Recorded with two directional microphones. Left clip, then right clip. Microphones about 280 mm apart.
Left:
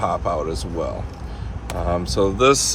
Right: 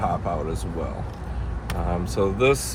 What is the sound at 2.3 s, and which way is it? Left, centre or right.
Speech, left.